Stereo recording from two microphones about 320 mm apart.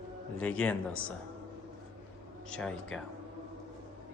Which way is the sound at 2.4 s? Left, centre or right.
Centre.